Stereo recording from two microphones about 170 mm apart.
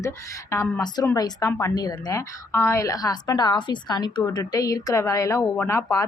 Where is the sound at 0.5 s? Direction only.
20° left (ahead or behind).